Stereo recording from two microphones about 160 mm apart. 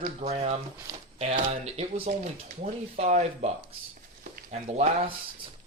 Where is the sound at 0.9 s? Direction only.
25° right (ahead or behind).